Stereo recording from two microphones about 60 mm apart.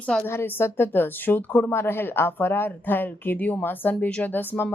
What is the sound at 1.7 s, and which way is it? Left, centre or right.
A woman's voice, left.